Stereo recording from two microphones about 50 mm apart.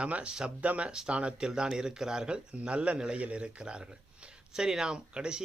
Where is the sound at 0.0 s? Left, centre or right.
Right.